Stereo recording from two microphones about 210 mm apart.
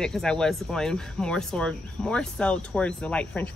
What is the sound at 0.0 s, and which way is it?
Speech, 5° left (ahead or behind).